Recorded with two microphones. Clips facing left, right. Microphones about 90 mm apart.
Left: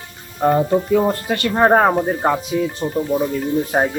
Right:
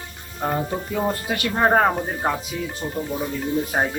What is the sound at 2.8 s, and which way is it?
Speech, 25° left (ahead or behind).